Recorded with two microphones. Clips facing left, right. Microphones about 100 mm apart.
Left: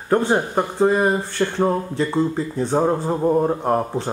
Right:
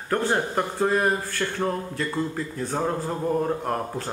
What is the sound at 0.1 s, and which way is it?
Speech, 20° left (ahead or behind).